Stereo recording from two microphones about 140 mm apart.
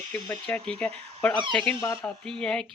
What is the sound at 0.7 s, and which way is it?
Speech, 10° left (ahead or behind).